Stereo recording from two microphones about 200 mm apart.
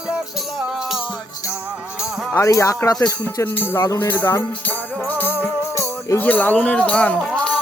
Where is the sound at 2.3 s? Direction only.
15° left (ahead or behind).